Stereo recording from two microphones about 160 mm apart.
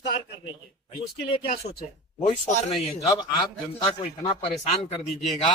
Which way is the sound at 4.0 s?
40° left (ahead or behind).